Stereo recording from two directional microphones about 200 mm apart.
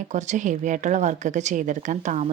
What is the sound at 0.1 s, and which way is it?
A woman's voice, 35° right (ahead or behind).